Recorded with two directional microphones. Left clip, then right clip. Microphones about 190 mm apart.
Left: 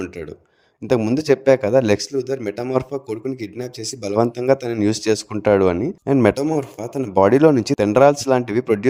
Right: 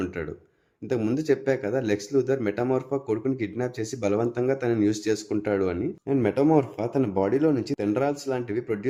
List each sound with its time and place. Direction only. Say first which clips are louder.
1.0 s speech: left 8 dB; 45° left (ahead or behind)
6.6 s speech: even; 5° left (ahead or behind)
7.1 s speech: left 13 dB; 50° left (ahead or behind)